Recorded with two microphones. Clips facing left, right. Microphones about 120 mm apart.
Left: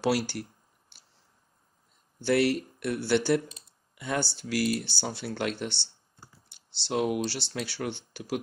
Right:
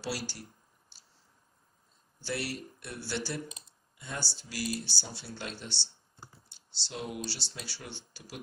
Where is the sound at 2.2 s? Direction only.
60° left (ahead or behind).